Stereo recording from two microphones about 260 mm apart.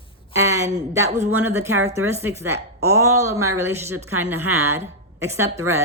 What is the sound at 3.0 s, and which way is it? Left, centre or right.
A woman's voice, centre.